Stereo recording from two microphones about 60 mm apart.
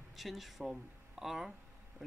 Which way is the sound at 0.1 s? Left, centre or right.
Centre.